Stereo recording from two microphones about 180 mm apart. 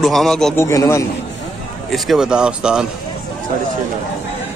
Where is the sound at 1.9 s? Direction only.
Centre (ahead or behind).